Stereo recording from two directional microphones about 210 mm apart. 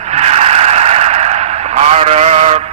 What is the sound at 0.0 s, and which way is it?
Vehicle, 30° right (ahead or behind).